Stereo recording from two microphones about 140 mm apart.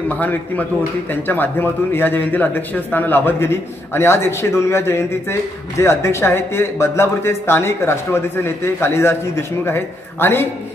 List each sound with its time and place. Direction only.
0.1 s a man's voice: 10° left (ahead or behind)